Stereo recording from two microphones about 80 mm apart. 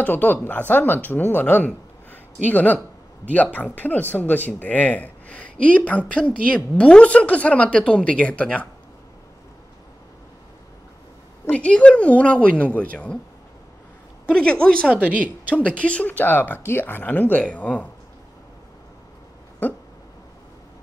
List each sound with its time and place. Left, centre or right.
0.0 s speech: left
11.5 s speech: centre
14.2 s speech: centre
14.9 s a woman's voice: centre
15.8 s speech: centre